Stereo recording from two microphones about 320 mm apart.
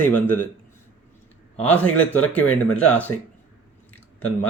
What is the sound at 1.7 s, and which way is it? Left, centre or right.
A man's voice, centre.